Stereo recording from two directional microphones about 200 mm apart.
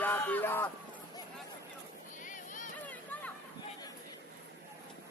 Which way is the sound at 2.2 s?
40° left (ahead or behind).